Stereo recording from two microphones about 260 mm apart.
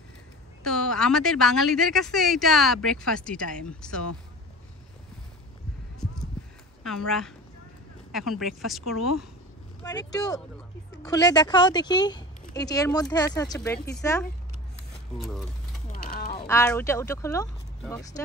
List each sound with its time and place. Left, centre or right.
0.7 s a woman's voice: centre
7.1 s speech: centre
9.8 s speech: centre
15.1 s speech: centre
15.9 s mechanisms: left
16.3 s speech: centre